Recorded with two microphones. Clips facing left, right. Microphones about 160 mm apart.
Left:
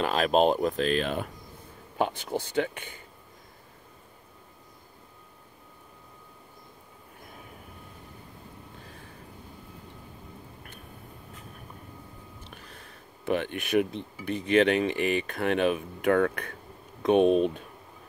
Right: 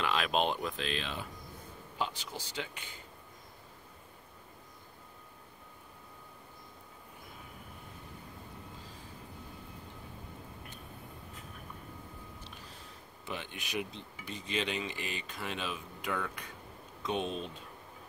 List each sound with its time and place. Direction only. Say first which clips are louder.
0.0 s speech: left 8 dB; 40° left (ahead or behind); by 3.0 s 55° left (ahead or behind)
12.4 s speech: left 3 dB; 60° left (ahead or behind)